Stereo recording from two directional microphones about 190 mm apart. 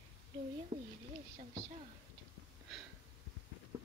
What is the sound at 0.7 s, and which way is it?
Speech, 40° right (ahead or behind).